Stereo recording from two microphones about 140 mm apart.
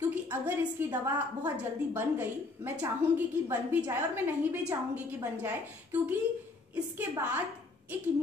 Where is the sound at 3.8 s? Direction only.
15° right (ahead or behind).